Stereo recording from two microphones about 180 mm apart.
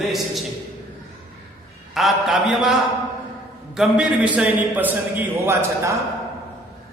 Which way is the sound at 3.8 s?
5° right (ahead or behind).